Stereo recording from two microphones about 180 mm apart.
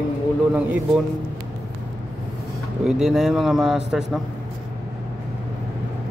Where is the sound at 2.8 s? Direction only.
Centre (ahead or behind).